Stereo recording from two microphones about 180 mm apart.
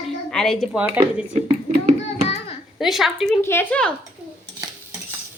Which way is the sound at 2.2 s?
35° left (ahead or behind).